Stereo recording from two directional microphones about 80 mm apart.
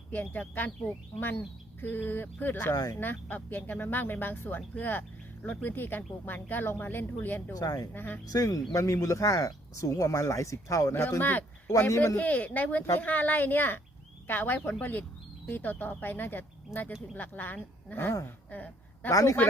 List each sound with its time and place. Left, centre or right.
0.1 s speech: left
1.8 s speech: left
2.7 s speech: left
3.0 s speech: left
7.5 s speech: left
7.9 s speech: left
8.3 s speech: left
11.2 s speech: left
11.9 s a man's voice: left
12.1 s speech: left
18.5 s a woman's voice: left
19.1 s speech: left